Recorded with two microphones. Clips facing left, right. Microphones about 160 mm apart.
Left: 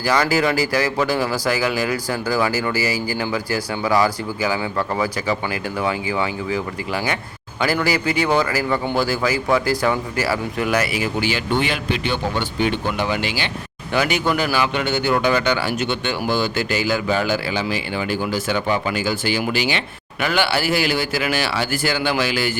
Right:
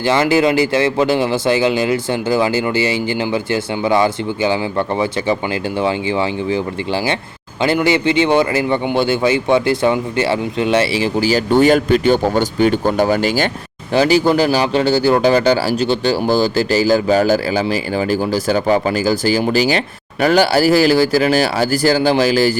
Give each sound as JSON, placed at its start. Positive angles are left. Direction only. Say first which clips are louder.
{"t": 0.0, "sound": "a man's voice", "louder": "right 5 dB", "side_deg": -25}
{"t": 13.9, "sound": "speech", "louder": "right 7 dB", "side_deg": -30}